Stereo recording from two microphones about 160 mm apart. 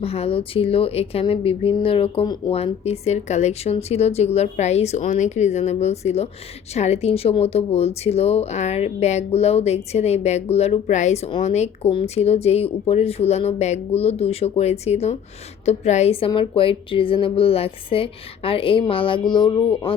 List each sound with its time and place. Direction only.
0.0 s speech: 40° left (ahead or behind)